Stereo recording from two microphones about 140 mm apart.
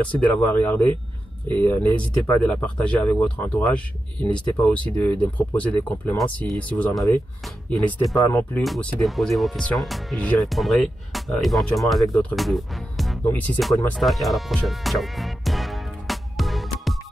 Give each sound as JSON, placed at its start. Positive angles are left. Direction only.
{"t": 0.1, "sound": "speech", "side_deg": 10}
{"t": 8.2, "sound": "speech", "side_deg": 20}
{"t": 8.6, "sound": "speech", "side_deg": 0}
{"t": 13.2, "sound": "speech", "side_deg": 10}
{"t": 13.9, "sound": "music", "side_deg": 0}